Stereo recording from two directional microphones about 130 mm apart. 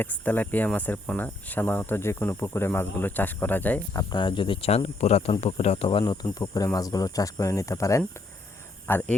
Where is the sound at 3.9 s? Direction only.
25° left (ahead or behind).